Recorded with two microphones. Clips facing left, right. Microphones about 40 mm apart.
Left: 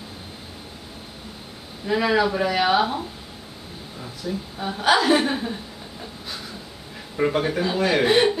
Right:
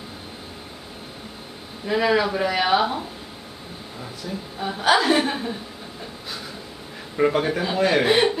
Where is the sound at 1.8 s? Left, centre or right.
Centre.